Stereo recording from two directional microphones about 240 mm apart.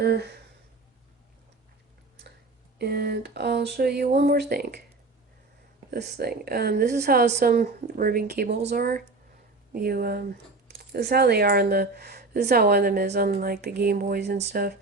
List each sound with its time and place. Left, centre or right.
0.0 s speech: right
2.7 s speech: right
5.9 s speech: right